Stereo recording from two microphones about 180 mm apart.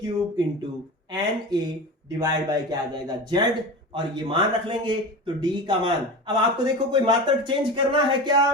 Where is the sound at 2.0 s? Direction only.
20° right (ahead or behind).